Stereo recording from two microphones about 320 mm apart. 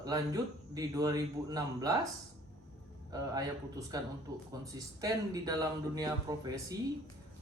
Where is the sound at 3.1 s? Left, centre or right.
Centre.